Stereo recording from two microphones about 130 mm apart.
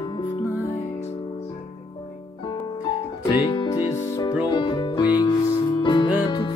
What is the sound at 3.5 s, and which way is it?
Music, 35° left (ahead or behind).